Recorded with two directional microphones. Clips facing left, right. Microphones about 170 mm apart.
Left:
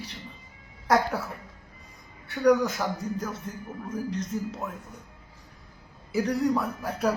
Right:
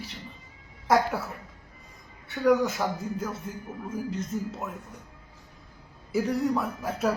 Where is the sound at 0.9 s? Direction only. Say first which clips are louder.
Even; centre (ahead or behind).